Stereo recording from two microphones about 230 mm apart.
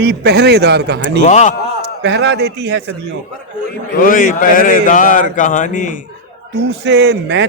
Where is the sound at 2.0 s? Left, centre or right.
Right.